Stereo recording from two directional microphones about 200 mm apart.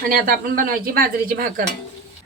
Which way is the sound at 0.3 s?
45° right (ahead or behind).